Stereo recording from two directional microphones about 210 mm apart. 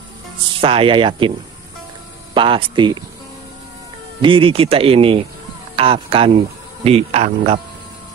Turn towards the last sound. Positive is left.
turn(degrees=-30)  # may be behind; listen again after turning